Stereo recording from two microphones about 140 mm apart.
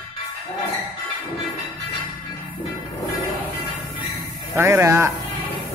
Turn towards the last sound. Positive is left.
turn(degrees=-20)  # may be behind; listen again after turning